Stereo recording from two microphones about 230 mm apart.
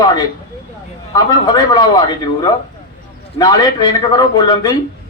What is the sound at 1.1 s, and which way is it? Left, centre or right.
A man's voice, centre.